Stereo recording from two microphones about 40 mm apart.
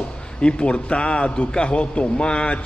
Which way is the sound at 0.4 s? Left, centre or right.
Left.